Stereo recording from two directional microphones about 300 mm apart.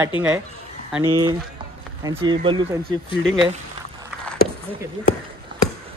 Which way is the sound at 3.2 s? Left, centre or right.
Centre.